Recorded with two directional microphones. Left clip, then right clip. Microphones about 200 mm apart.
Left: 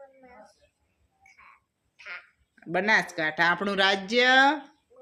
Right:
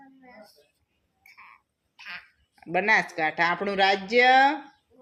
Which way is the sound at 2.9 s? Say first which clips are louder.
Right 1 dB; 15° left (ahead or behind).